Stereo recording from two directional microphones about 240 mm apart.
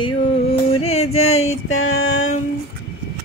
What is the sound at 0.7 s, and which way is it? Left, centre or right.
Yodeling, left.